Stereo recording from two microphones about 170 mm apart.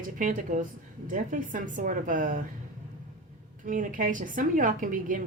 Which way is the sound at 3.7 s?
50° right (ahead or behind).